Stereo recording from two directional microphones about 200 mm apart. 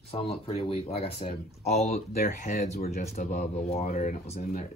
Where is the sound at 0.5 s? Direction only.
30° left (ahead or behind).